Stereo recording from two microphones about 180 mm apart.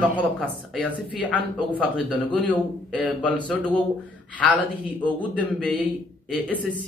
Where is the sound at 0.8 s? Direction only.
10° left (ahead or behind).